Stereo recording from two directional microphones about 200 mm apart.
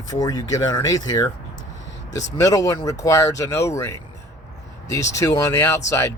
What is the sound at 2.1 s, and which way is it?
Speech, 65° left (ahead or behind).